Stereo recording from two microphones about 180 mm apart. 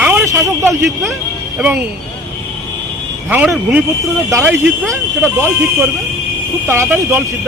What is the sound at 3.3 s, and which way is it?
Speech, 5° right (ahead or behind).